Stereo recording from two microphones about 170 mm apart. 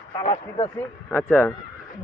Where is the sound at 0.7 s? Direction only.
10° left (ahead or behind).